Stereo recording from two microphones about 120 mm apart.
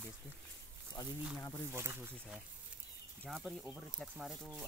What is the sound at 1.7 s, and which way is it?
Speech, 20° right (ahead or behind).